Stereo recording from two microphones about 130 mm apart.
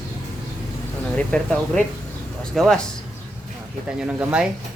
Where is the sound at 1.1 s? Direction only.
10° left (ahead or behind).